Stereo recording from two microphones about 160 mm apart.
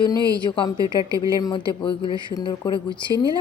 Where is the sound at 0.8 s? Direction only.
20° right (ahead or behind).